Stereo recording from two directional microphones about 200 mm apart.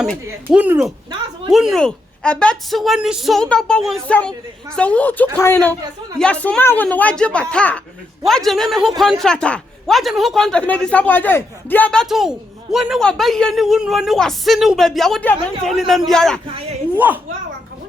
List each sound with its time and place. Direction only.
0.5 s speech: 5° right (ahead or behind)
16.5 s a man's voice: 30° right (ahead or behind)